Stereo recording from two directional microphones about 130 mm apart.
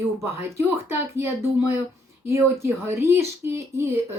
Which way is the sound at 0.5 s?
20° right (ahead or behind).